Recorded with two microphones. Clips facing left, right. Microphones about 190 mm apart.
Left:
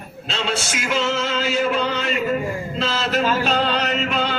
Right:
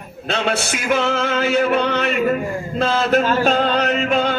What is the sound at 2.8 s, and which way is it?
Music, 55° right (ahead or behind).